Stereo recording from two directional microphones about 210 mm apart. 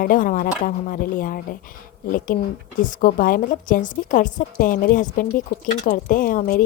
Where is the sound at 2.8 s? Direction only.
40° left (ahead or behind).